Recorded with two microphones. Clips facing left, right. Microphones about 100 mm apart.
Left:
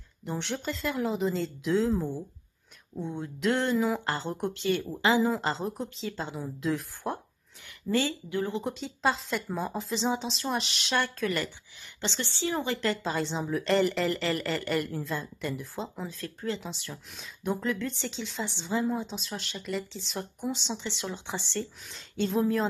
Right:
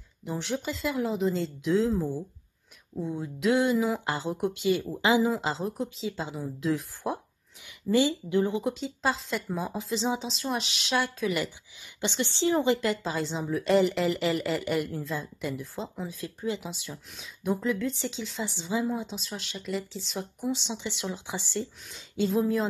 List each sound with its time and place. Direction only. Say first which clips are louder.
0.2 s speech: right 2 dB; centre (ahead or behind)
7.9 s speech: right 4 dB; 15° right (ahead or behind)
8.6 s a woman's voice: even; centre (ahead or behind); by 12.8 s 20° right (ahead or behind)
12.8 s speech: even; 5° right (ahead or behind)
16.2 s speech: right 2 dB; 10° right (ahead or behind)